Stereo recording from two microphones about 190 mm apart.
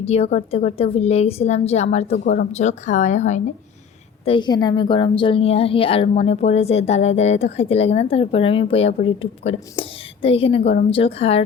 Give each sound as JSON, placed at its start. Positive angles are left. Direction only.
{"t": 0.0, "sound": "a woman's voice", "side_deg": 35}
{"t": 4.3, "sound": "a woman's voice", "side_deg": 25}